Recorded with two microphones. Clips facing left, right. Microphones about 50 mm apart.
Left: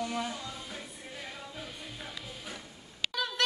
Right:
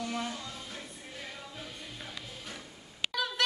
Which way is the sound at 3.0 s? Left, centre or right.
Right.